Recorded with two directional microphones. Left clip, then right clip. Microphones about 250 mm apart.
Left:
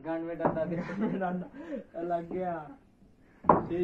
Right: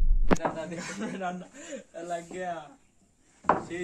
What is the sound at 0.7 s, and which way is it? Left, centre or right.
Speech, right.